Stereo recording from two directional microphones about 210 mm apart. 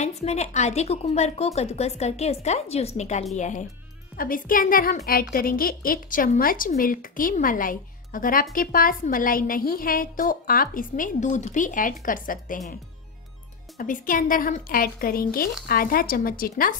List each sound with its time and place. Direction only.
0.0 s a woman's voice: 30° left (ahead or behind)
13.7 s speech: 40° left (ahead or behind)